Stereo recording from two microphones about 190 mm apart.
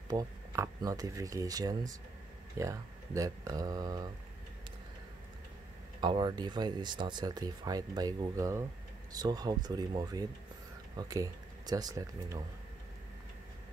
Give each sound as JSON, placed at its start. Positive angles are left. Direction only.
{"t": 0.1, "sound": "speech", "side_deg": -15}
{"t": 5.9, "sound": "speech", "side_deg": -25}